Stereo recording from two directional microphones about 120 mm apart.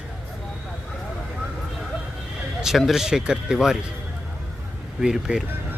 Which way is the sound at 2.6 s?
Centre (ahead or behind).